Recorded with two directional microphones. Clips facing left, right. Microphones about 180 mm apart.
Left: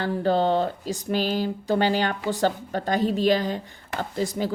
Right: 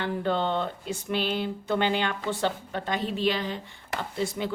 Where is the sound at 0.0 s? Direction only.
40° left (ahead or behind).